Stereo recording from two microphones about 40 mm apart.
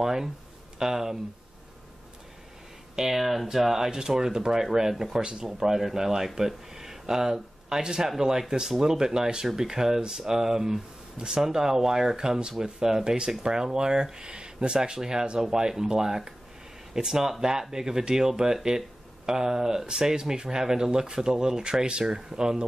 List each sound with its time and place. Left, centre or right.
0.0 s a sound: centre
0.7 s speech: centre
3.0 s speech: centre